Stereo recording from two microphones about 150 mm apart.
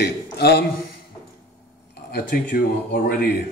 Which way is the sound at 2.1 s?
70° left (ahead or behind).